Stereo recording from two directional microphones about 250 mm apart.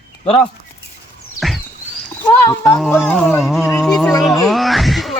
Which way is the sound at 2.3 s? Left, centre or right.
Centre.